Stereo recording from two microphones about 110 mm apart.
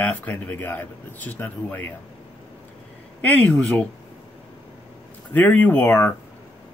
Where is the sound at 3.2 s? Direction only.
15° left (ahead or behind).